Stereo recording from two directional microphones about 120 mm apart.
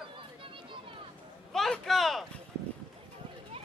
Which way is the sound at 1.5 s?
Centre (ahead or behind).